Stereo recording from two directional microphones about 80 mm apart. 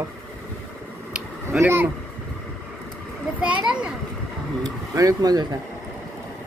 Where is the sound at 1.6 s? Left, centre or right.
Right.